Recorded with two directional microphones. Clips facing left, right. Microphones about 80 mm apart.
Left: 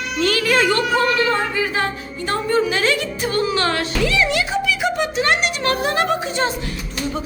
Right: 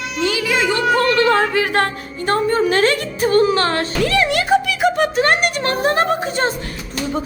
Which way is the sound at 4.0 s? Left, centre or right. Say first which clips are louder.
Right 3 dB; right.